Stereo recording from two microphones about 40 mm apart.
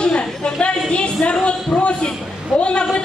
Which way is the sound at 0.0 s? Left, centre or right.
Left.